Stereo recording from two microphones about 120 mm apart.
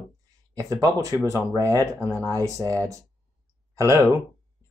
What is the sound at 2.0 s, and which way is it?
Speech, 15° left (ahead or behind).